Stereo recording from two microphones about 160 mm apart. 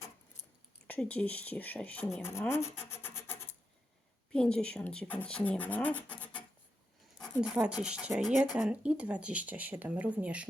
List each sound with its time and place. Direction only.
0.9 s speech: 10° left (ahead or behind)
2.2 s rub: 15° left (ahead or behind)
4.3 s speech: 5° left (ahead or behind)
7.3 s speech: 5° right (ahead or behind)